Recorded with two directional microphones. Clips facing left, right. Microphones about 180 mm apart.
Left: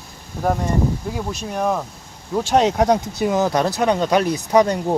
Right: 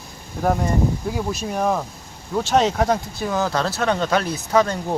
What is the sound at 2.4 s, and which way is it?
Speech, 10° left (ahead or behind).